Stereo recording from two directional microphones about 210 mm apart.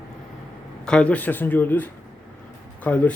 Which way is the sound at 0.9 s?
5° left (ahead or behind).